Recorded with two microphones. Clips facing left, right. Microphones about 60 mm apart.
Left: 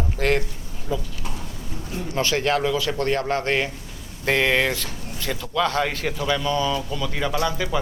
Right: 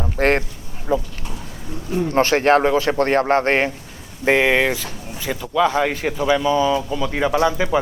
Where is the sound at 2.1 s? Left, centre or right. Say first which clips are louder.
Right 7 dB; right.